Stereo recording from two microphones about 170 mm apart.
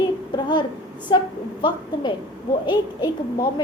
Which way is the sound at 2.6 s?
25° left (ahead or behind).